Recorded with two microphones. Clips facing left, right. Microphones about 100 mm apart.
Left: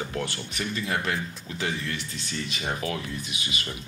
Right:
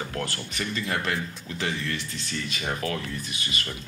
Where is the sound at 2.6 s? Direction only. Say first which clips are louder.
Right 1 dB; 15° left (ahead or behind).